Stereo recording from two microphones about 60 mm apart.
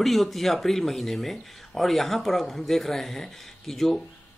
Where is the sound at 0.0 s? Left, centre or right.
Centre.